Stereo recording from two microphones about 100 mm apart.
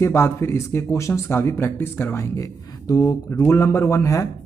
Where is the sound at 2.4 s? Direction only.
35° left (ahead or behind).